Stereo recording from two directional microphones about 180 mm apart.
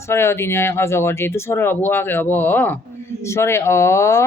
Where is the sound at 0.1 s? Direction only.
15° left (ahead or behind).